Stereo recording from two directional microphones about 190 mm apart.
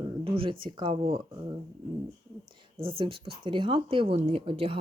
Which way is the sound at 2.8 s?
30° right (ahead or behind).